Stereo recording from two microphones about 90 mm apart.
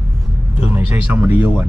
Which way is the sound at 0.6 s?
20° right (ahead or behind).